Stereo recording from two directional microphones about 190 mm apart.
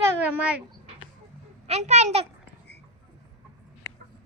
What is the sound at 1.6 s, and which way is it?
Speech, 35° right (ahead or behind).